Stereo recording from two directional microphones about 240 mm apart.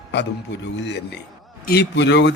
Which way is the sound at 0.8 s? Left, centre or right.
Left.